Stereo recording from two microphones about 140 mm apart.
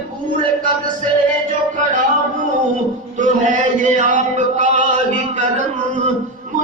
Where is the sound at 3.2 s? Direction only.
65° right (ahead or behind).